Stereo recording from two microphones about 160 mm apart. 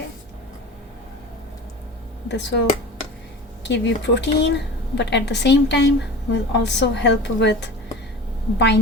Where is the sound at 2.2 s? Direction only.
90° left.